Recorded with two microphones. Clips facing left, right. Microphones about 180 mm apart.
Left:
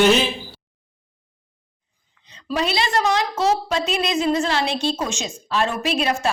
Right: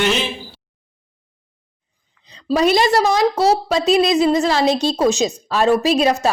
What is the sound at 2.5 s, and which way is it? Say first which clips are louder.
A woman's voice: right 8 dB; 40° right (ahead or behind).